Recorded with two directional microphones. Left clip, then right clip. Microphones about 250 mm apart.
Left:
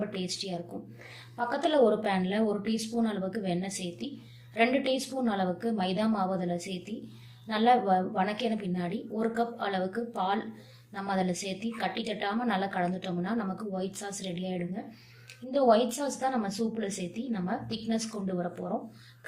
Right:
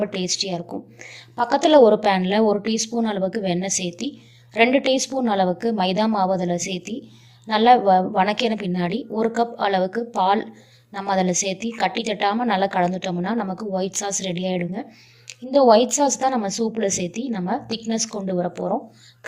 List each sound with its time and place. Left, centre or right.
0.0 s a woman's voice: right